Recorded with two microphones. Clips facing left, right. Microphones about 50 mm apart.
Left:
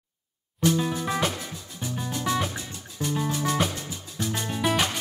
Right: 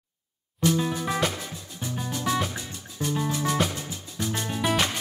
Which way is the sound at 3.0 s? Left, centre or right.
Right.